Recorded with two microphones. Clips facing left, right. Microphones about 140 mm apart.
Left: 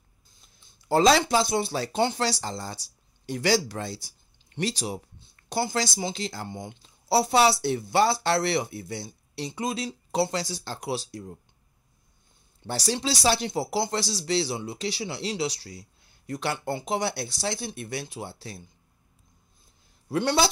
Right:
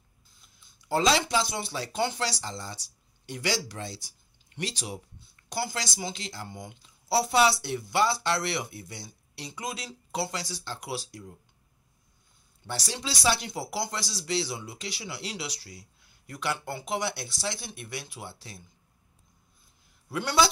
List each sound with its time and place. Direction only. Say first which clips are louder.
0.7 s a sound: left 5 dB; 35° left (ahead or behind)
1.3 s speech: left 5 dB; 40° left (ahead or behind)
1.9 s a woman's voice: left 2 dB; 30° left (ahead or behind)
2.4 s speech: left 4 dB; 40° left (ahead or behind)
4.6 s a woman's voice: left 6 dB; 35° left (ahead or behind)
12.6 s a woman's voice: left 7 dB; 35° left (ahead or behind)
20.2 s a woman's voice: left 2 dB; 25° left (ahead or behind)